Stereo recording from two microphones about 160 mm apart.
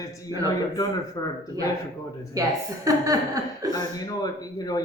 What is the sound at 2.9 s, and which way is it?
Speech, 20° right (ahead or behind).